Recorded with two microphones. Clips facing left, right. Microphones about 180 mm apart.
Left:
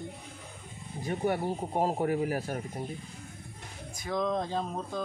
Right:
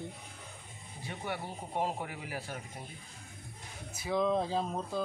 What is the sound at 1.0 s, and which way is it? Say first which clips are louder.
Speech: left 9 dB; 45° left (ahead or behind).